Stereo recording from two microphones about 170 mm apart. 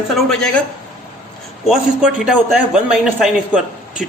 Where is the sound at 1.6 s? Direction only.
Centre (ahead or behind).